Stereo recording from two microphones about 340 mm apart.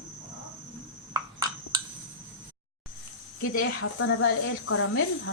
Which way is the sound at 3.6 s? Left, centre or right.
Left.